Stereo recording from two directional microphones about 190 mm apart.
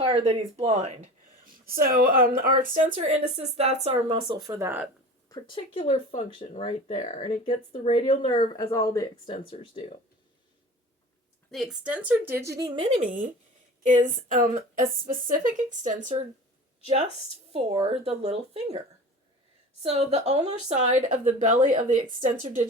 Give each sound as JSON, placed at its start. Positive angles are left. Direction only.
{"t": 0.0, "sound": "speech", "side_deg": -30}
{"t": 4.1, "sound": "a woman's voice", "side_deg": -20}
{"t": 5.3, "sound": "speech", "side_deg": 25}
{"t": 11.5, "sound": "a woman's voice", "side_deg": -5}
{"t": 13.8, "sound": "a woman's voice", "side_deg": -40}
{"t": 17.5, "sound": "speech", "side_deg": -25}
{"t": 19.8, "sound": "a woman's voice", "side_deg": -35}